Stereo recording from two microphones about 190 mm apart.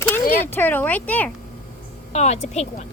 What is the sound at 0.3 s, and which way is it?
Speech, 10° left (ahead or behind).